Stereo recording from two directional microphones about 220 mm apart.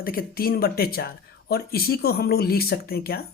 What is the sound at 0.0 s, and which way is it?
Speech, 40° left (ahead or behind).